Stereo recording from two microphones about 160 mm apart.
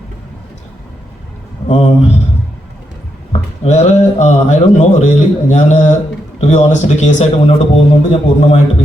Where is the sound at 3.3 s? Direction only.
45° left (ahead or behind).